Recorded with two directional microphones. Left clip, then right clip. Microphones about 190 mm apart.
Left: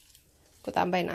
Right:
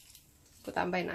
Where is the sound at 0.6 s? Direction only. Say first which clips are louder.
Left 6 dB; 40° left (ahead or behind).